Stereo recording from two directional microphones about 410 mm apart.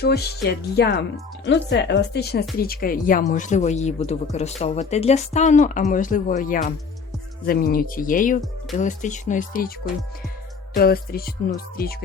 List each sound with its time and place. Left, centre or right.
0.0 s a woman's voice: left
10.8 s speech: left